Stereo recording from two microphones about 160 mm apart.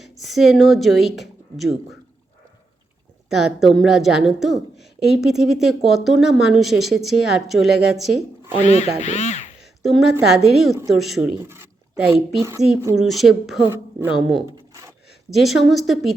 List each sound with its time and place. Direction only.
0.0 s a woman's voice: centre (ahead or behind)
3.2 s a woman's voice: centre (ahead or behind)
8.6 s speech: 45° left (ahead or behind)
9.8 s a woman's voice: centre (ahead or behind)
11.4 s a sound: 10° right (ahead or behind)
12.4 s speech: 20° right (ahead or behind)
13.0 s a woman's voice: centre (ahead or behind)
13.7 s a woman's voice: 15° right (ahead or behind)
15.3 s a woman's voice: centre (ahead or behind)